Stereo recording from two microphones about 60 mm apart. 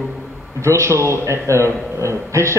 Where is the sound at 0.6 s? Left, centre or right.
Right.